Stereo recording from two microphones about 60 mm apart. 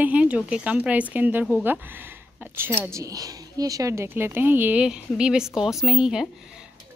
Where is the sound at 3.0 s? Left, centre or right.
Right.